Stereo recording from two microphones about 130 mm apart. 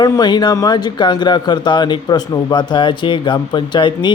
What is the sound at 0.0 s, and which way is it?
Speech, 30° left (ahead or behind).